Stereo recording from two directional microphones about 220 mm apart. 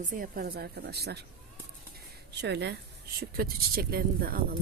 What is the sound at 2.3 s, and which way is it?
Speech, 50° right (ahead or behind).